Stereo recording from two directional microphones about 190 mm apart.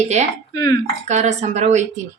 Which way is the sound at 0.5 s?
20° left (ahead or behind).